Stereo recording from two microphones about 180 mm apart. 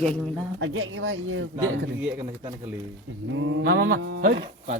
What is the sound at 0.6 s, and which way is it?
Speech, 90° right.